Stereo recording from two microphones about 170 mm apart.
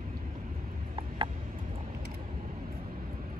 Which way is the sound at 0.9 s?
30° right (ahead or behind).